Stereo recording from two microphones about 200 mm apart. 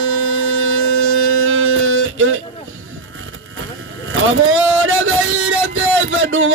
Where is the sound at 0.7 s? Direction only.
90° right.